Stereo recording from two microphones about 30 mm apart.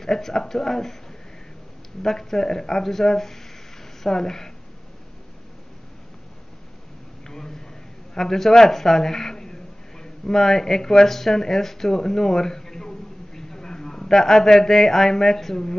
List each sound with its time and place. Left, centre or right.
0.0 s speech: centre
2.0 s speech: centre
7.2 s a sound: centre
10.4 s speech: centre